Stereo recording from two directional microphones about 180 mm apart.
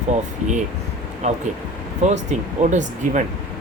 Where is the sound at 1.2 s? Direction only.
40° right (ahead or behind).